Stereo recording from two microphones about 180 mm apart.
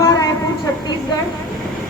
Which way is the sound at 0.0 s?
20° left (ahead or behind).